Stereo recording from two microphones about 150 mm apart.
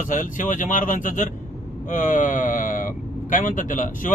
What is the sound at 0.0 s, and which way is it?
Speech, 60° left (ahead or behind).